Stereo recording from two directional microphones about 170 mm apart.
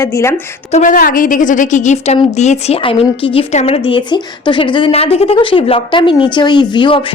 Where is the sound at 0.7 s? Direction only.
45° left (ahead or behind).